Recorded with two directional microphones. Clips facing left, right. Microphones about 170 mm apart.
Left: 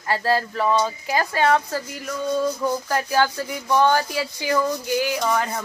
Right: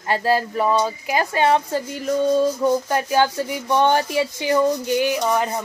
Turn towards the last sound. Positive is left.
turn(degrees=-20)  # may be behind; listen again after turning